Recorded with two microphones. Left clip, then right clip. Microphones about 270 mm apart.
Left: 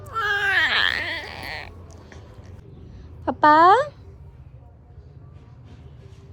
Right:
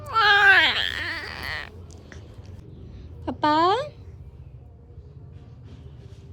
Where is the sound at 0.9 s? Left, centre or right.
Centre.